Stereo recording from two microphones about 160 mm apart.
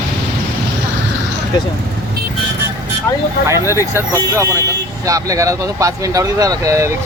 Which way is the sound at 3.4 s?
15° right (ahead or behind).